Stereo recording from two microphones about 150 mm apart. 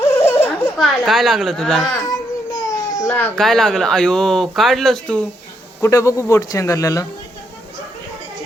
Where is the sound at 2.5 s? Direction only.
25° left (ahead or behind).